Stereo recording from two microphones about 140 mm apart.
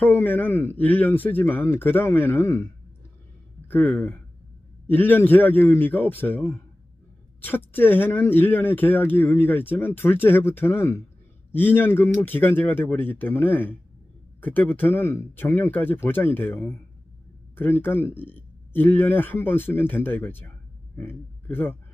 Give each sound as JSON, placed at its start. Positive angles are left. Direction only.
{"t": 0.0, "sound": "speech", "side_deg": 15}
{"t": 3.7, "sound": "a man's voice", "side_deg": 15}